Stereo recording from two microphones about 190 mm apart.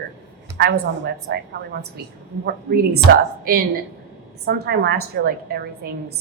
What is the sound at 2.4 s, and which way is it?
A woman's voice, 55° right (ahead or behind).